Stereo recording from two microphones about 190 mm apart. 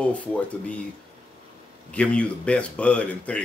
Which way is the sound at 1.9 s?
5° left (ahead or behind).